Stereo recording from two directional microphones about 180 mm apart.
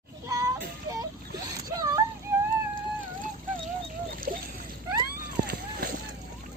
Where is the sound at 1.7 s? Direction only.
20° right (ahead or behind).